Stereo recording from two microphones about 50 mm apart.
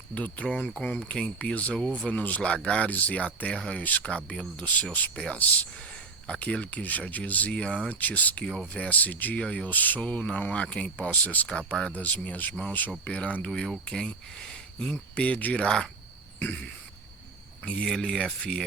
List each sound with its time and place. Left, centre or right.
0.1 s speech: left
6.2 s speech: left
8.4 s speech: centre
8.7 s speech: left
11.4 s speech: left
13.8 s speech: centre
15.6 s speech: centre
16.4 s speech: left
17.8 s speech: centre